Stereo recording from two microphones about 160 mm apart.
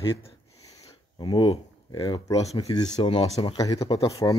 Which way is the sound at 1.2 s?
30° left (ahead or behind).